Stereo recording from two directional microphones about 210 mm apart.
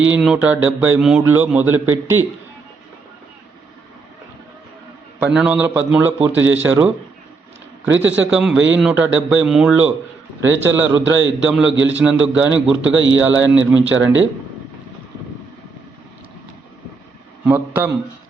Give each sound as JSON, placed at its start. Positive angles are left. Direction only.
{"t": 0.0, "sound": "a man's voice", "side_deg": -5}
{"t": 5.2, "sound": "a man's voice", "side_deg": -5}
{"t": 8.1, "sound": "a man's voice", "side_deg": -5}
{"t": 13.8, "sound": "speech", "side_deg": -65}
{"t": 17.4, "sound": "a man's voice", "side_deg": -5}